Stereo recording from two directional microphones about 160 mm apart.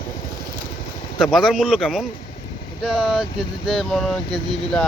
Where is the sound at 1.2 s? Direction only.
Centre (ahead or behind).